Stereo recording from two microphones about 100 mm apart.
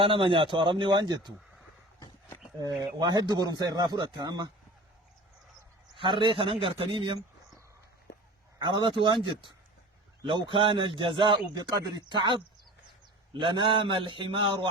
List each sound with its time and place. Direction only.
0.0 s speech: 60° right (ahead or behind)
3.0 s a man's voice: 45° right (ahead or behind)
6.0 s speech: 55° right (ahead or behind)
8.5 s a man's voice: 50° right (ahead or behind)
11.5 s a man's voice: 45° right (ahead or behind)